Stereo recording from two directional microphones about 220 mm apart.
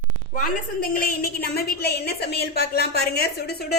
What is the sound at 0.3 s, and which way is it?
A woman's voice, 40° left (ahead or behind).